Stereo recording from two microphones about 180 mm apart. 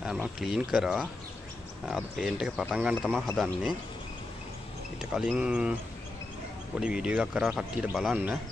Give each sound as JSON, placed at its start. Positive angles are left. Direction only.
{"t": 0.0, "sound": "speech", "side_deg": -5}
{"t": 4.9, "sound": "speech", "side_deg": -5}
{"t": 6.8, "sound": "speech", "side_deg": -5}